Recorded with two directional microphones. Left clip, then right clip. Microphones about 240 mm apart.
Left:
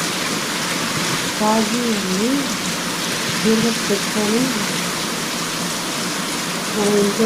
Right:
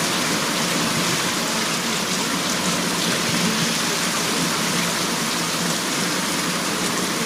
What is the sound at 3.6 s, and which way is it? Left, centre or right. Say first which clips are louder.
Speech: left 2 dB; centre.